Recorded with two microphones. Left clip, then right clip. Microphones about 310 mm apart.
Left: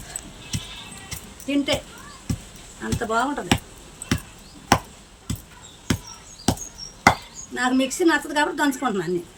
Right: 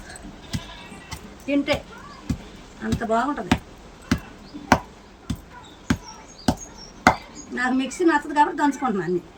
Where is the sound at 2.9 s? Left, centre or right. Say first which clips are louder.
Even; centre.